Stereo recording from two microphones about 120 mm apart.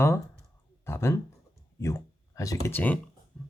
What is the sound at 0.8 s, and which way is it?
Speech, 20° left (ahead or behind).